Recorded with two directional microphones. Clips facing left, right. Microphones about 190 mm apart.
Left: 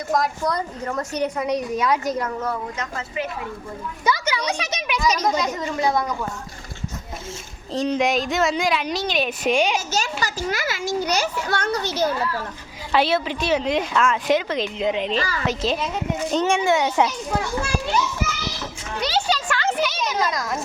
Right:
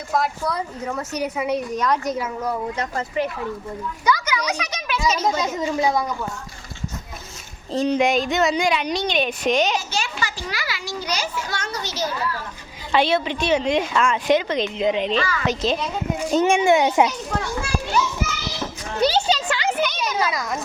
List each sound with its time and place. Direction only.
0.1 s speech: 5° right (ahead or behind)
2.7 s speech: 40° right (ahead or behind)
4.0 s a child's voice: 25° left (ahead or behind)
5.6 s a child's voice: 10° right (ahead or behind)
7.7 s speech: centre (ahead or behind)
9.9 s a child's voice: 40° left (ahead or behind)
12.9 s speech: 5° left (ahead or behind)
15.1 s a woman's voice: 35° left (ahead or behind)
15.4 s speech: 5° left (ahead or behind)
16.1 s a child's voice: 10° right (ahead or behind)
18.9 s a sound: 30° right (ahead or behind)
19.7 s a sound: centre (ahead or behind)